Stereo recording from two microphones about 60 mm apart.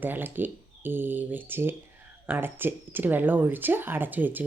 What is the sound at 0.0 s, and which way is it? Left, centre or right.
A woman's voice, right.